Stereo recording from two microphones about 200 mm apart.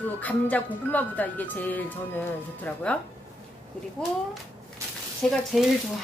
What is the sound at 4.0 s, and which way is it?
Speech, 5° left (ahead or behind).